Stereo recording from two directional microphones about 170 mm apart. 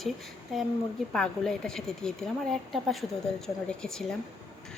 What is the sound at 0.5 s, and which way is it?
Speech, centre (ahead or behind).